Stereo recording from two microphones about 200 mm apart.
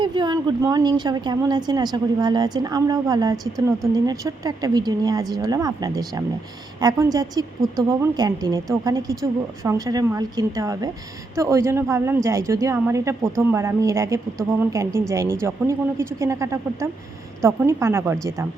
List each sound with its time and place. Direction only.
0.0 s a woman's voice: 20° right (ahead or behind)